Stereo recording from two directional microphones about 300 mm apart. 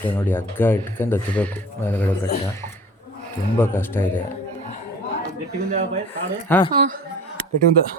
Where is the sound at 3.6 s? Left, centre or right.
Centre.